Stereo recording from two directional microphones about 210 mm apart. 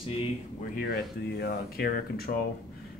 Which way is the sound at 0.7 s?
50° left (ahead or behind).